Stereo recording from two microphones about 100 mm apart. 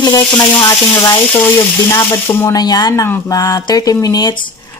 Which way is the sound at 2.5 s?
40° left (ahead or behind).